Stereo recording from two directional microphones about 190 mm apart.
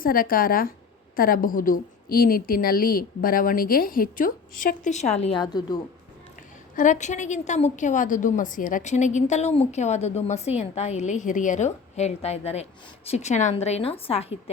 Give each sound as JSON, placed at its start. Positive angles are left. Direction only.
{"t": 0.0, "sound": "a woman's voice", "side_deg": 50}
{"t": 5.4, "sound": "a woman's voice", "side_deg": 20}
{"t": 6.7, "sound": "a woman's voice", "side_deg": 40}